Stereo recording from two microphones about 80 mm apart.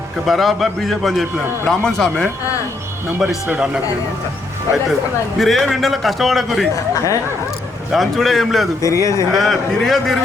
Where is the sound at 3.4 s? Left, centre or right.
Centre.